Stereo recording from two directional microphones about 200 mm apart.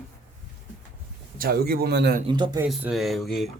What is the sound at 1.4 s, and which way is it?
Speech, 50° right (ahead or behind).